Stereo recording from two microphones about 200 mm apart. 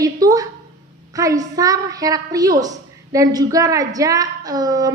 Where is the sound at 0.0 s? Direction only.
20° right (ahead or behind).